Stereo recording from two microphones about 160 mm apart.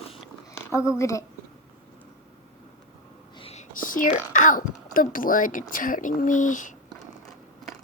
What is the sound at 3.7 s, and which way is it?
Speech, 60° left (ahead or behind).